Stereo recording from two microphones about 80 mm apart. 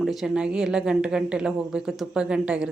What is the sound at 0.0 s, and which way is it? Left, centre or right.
A man's voice, centre.